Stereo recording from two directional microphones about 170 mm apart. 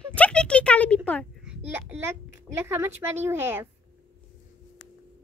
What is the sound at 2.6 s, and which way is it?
Child singing, 15° right (ahead or behind).